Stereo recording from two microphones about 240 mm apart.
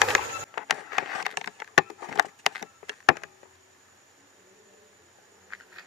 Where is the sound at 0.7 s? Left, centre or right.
Centre.